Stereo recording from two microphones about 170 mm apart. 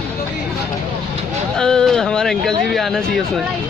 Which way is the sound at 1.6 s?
5° left (ahead or behind).